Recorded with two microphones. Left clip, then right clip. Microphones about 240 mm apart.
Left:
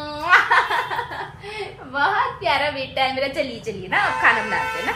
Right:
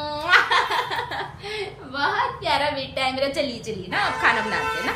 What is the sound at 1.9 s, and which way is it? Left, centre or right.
A woman's voice, centre.